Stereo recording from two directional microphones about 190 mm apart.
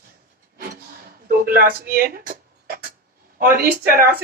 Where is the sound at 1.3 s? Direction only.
50° right (ahead or behind).